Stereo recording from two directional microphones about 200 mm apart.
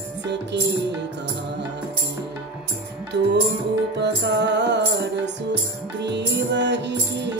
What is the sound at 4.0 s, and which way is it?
Music, 60° right (ahead or behind).